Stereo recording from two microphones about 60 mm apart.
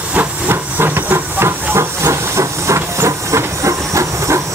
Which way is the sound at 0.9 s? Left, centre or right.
Right.